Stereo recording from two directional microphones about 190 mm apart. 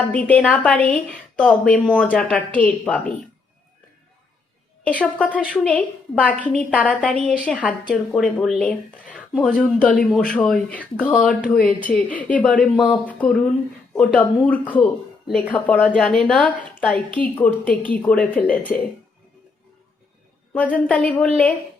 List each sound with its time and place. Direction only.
0.1 s a woman's voice: 5° left (ahead or behind)
4.9 s a woman's voice: 5° left (ahead or behind)
20.5 s a woman's voice: 10° left (ahead or behind)